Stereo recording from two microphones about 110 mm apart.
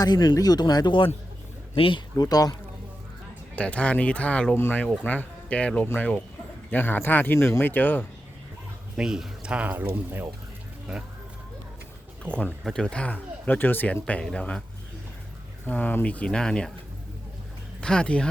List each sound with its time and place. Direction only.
0.0 s speech: 40° left (ahead or behind)
2.1 s speech: 35° left (ahead or behind)
3.5 s speech: 10° left (ahead or behind)
9.0 s speech: 5° right (ahead or behind)
12.2 s speech: 10° left (ahead or behind)
15.6 s speech: 15° left (ahead or behind)
17.7 s speech: 10° left (ahead or behind)